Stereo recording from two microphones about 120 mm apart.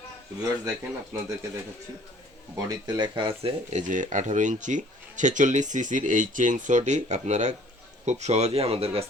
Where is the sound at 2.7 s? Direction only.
35° right (ahead or behind).